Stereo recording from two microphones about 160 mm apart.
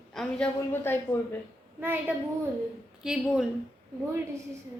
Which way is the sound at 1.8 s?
10° right (ahead or behind).